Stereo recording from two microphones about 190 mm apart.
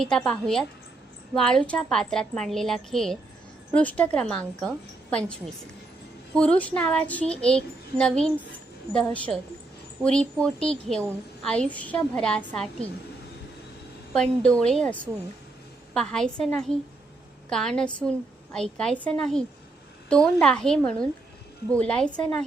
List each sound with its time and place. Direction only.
0.0 s a child's voice: 5° left (ahead or behind)
6.3 s a child's voice: 5° left (ahead or behind)
14.1 s a child's voice: 5° left (ahead or behind)
16.0 s a child's voice: 5° left (ahead or behind)